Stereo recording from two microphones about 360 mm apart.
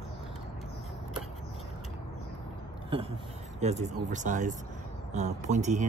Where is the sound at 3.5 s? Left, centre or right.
Centre.